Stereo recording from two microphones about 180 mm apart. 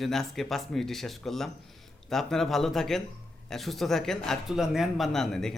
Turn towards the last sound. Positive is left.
turn(degrees=0)  # may be behind; listen again after turning